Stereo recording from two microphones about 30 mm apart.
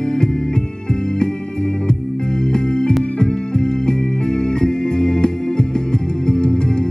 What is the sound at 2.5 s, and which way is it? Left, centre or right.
Music, left.